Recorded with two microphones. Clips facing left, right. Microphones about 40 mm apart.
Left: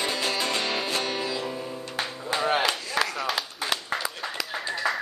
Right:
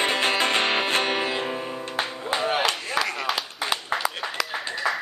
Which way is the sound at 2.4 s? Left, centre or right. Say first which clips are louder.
Even; centre.